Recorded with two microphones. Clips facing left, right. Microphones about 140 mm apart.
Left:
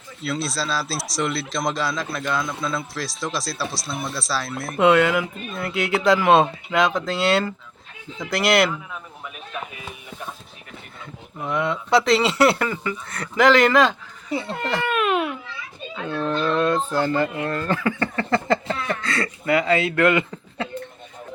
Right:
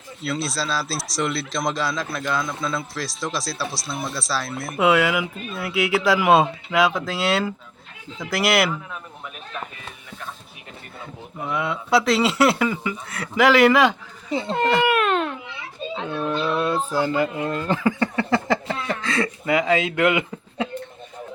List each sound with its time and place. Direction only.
0.2 s speech: centre (ahead or behind)
9.6 s a sound: 10° left (ahead or behind)
11.4 s speech: 5° right (ahead or behind)
14.3 s speech: 20° right (ahead or behind)
14.8 s baby cry: centre (ahead or behind)
15.4 s children playing: 25° right (ahead or behind)
16.1 s a sound: 10° right (ahead or behind)
17.4 s speech: 15° right (ahead or behind)